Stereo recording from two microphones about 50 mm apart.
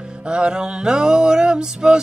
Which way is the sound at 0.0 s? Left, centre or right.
Centre.